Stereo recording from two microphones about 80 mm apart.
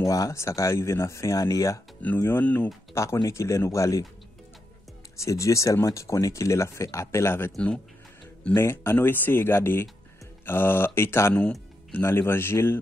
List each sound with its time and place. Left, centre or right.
0.0 s speech: left
2.2 s speech: left
2.9 s speech: left
5.1 s speech: left
8.5 s speech: left